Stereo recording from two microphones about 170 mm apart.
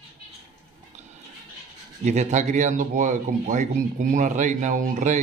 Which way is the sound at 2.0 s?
45° right (ahead or behind).